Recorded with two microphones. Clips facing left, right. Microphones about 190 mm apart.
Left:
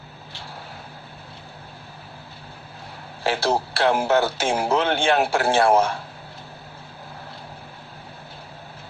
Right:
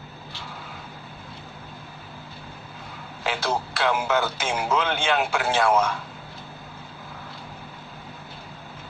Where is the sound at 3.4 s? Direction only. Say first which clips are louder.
Left 4 dB; 35° left (ahead or behind).